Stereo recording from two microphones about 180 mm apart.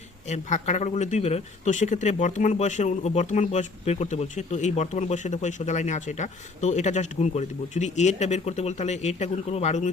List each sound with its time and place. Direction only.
0.3 s a man's voice: 40° left (ahead or behind)